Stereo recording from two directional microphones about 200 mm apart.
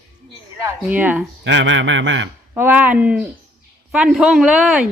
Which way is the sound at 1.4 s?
60° right (ahead or behind).